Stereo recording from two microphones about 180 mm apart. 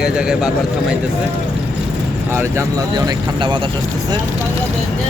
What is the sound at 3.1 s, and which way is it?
Speech, 25° right (ahead or behind).